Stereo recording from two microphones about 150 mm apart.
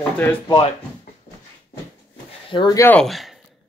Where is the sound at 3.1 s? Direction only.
Centre (ahead or behind).